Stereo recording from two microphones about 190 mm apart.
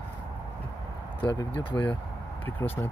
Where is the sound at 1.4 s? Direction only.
25° left (ahead or behind).